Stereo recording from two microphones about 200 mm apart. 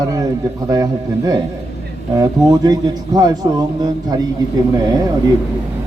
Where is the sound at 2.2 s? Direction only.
20° right (ahead or behind).